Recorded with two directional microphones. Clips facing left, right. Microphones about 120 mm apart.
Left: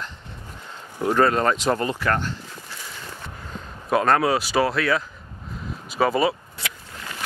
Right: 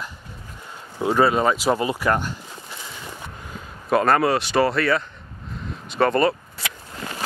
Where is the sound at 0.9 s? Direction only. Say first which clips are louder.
Right 1 dB; 10° right (ahead or behind).